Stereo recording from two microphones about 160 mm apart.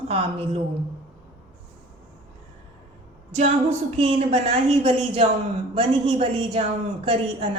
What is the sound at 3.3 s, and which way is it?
A woman's voice, 45° right (ahead or behind).